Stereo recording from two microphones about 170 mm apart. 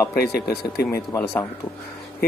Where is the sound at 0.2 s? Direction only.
65° left (ahead or behind).